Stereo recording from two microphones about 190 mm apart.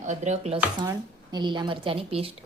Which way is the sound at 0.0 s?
40° right (ahead or behind).